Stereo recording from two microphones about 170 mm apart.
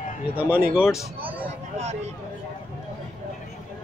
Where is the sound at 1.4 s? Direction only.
40° right (ahead or behind).